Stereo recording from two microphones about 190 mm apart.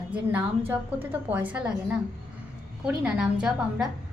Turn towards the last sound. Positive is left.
turn(degrees=-5)  # may be behind; listen again after turning